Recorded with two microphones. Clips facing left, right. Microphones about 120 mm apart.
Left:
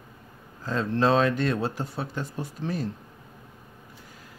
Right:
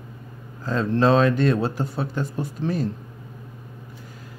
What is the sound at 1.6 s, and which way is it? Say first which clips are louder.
Speech: right 4 dB; 75° right (ahead or behind).